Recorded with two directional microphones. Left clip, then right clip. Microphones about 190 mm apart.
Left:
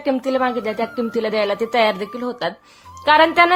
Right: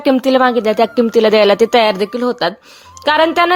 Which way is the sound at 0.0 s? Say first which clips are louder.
Right 8 dB; 45° right (ahead or behind).